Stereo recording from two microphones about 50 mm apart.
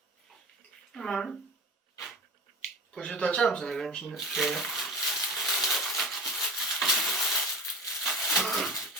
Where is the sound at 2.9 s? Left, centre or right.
Centre.